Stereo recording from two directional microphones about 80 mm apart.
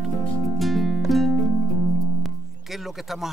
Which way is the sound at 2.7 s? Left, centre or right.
Centre.